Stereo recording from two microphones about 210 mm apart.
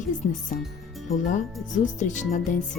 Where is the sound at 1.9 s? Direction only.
35° left (ahead or behind).